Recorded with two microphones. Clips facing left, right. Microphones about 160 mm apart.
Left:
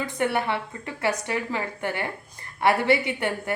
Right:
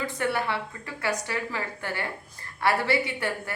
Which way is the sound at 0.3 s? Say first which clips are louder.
Left 3 dB; 20° left (ahead or behind).